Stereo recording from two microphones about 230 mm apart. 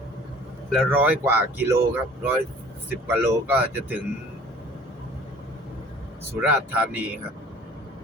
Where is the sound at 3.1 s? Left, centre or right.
Centre.